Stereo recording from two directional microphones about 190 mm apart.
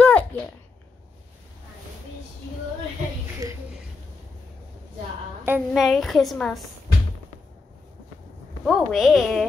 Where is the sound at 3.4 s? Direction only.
20° right (ahead or behind).